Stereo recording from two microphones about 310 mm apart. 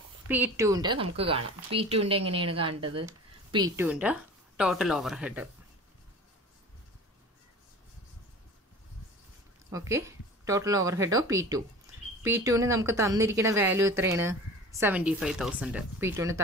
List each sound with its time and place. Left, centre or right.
0.3 s speech: centre
9.7 s speech: centre